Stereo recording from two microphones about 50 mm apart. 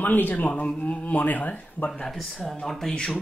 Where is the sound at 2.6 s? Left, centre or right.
Centre.